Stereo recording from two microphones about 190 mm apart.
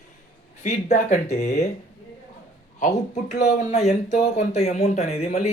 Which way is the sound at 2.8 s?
40° left (ahead or behind).